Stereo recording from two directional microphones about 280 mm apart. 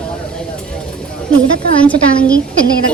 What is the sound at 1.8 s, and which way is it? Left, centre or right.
Speech, centre.